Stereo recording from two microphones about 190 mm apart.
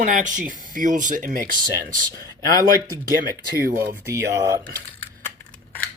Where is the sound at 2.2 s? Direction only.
20° left (ahead or behind).